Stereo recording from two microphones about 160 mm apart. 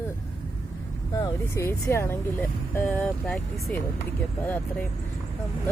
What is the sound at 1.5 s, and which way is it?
Speech, 15° left (ahead or behind).